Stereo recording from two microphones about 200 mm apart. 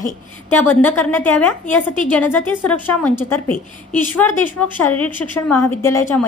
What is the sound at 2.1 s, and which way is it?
A woman's voice, 10° left (ahead or behind).